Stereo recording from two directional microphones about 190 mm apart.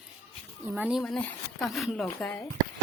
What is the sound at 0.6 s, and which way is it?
Speech, 5° right (ahead or behind).